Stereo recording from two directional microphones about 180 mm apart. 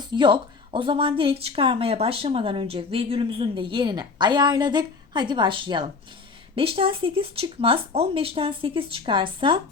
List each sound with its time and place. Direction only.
0.1 s speech: 25° right (ahead or behind)